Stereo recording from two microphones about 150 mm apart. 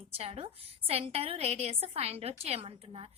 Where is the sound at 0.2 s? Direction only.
40° right (ahead or behind).